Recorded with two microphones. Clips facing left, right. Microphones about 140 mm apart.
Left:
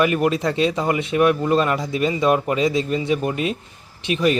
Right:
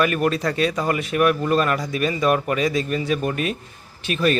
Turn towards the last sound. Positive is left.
turn(degrees=20)  # may be behind; listen again after turning